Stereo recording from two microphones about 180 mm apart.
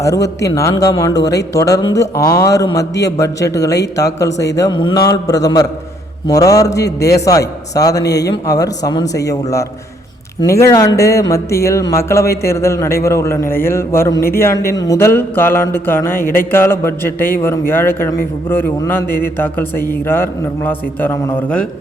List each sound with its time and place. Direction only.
0.0 s a man's voice: 20° left (ahead or behind)